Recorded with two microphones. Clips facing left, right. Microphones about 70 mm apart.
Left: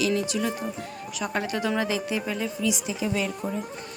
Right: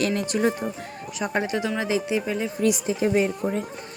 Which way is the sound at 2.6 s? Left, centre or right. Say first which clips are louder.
Right 7 dB; right.